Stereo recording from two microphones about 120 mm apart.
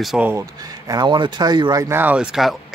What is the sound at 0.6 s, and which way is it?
A man's voice, 30° right (ahead or behind).